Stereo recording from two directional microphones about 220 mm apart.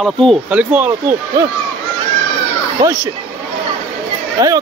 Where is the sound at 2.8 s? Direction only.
15° right (ahead or behind).